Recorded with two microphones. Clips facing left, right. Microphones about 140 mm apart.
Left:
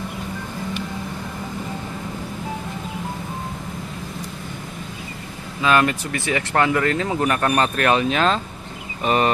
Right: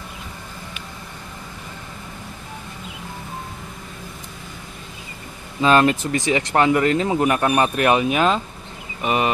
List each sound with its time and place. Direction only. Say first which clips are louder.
5.6 s speech: right 3 dB; 30° right (ahead or behind)
6.1 s speech: right 2 dB; 20° right (ahead or behind)